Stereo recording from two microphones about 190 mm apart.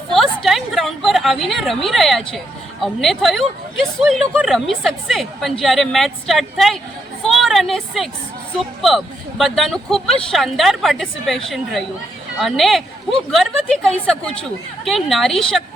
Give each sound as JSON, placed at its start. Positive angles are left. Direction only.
{"t": 0.1, "sound": "a woman's voice", "side_deg": 0}
{"t": 7.2, "sound": "a sound", "side_deg": 0}
{"t": 8.8, "sound": "speech", "side_deg": 0}